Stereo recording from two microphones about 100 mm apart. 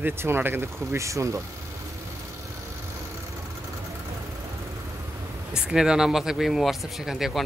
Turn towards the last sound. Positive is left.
turn(degrees=-5)  # may be behind; listen again after turning